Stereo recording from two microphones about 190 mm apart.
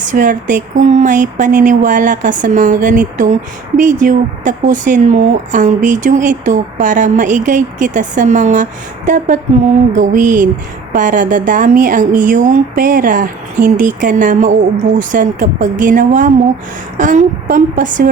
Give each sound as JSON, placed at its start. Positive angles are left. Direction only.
{"t": 0.0, "sound": "speech", "side_deg": -45}